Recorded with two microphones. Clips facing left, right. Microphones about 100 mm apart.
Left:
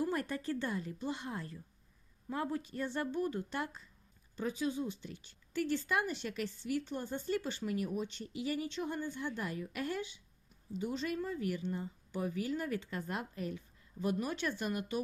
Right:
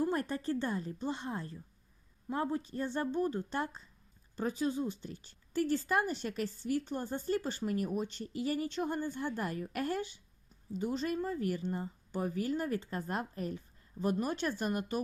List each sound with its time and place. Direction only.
0.0 s a woman's voice: 35° right (ahead or behind)